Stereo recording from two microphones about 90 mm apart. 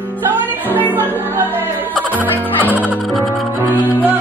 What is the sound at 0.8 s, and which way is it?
Music, 20° left (ahead or behind).